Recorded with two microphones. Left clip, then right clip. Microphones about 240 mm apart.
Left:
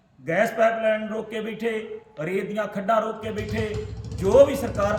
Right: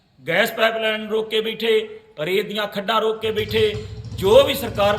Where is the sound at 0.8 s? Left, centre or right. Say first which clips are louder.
Right 2 dB; centre.